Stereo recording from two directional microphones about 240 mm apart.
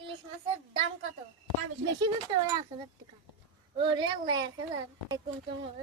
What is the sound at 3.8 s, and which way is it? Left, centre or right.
Speech, centre.